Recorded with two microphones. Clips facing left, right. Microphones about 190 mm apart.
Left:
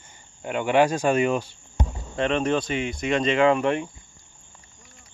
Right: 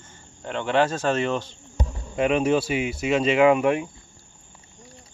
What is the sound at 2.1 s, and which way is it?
Speech, 10° right (ahead or behind).